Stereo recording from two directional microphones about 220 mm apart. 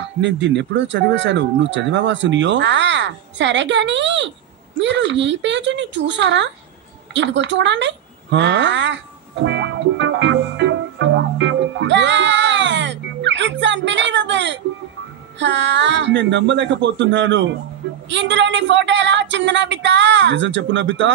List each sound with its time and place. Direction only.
0.2 s speech: 55° right (ahead or behind)
7.2 s a sound: 55° right (ahead or behind)
15.3 s speech: 55° right (ahead or behind)